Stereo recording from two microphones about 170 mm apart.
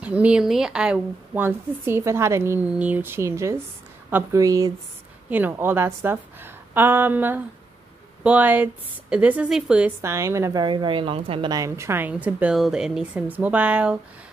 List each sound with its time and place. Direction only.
0.0 s a woman's voice: 10° right (ahead or behind); by 11.5 s 35° right (ahead or behind)
11.5 s a woman's voice: 15° right (ahead or behind)